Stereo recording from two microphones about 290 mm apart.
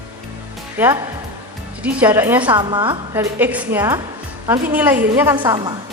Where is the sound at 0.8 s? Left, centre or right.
Centre.